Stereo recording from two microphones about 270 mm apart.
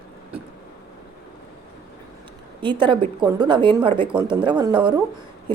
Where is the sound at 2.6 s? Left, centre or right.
Centre.